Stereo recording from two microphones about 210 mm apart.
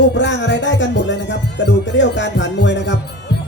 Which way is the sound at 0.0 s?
60° left (ahead or behind).